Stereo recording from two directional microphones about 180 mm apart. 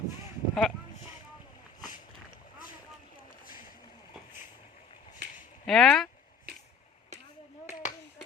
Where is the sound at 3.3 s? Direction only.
50° left (ahead or behind).